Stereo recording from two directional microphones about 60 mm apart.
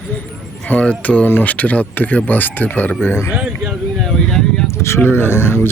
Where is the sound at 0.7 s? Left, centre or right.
Left.